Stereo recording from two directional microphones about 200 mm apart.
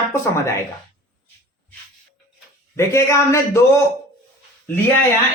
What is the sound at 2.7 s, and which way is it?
Speech, 15° left (ahead or behind).